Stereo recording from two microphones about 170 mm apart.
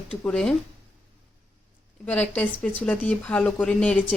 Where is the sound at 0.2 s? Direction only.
5° left (ahead or behind).